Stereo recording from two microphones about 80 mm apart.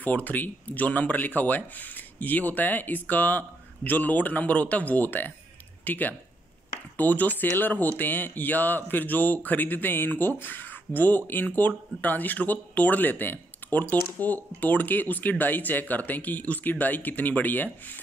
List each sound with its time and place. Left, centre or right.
0.0 s speech: left